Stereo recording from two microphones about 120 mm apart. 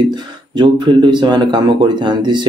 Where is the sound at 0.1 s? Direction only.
40° right (ahead or behind).